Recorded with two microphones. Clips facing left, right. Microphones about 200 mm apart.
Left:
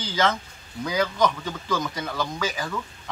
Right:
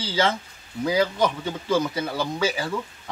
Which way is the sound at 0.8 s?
30° right (ahead or behind).